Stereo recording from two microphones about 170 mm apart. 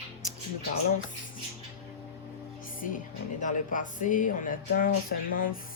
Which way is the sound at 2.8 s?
55° left (ahead or behind).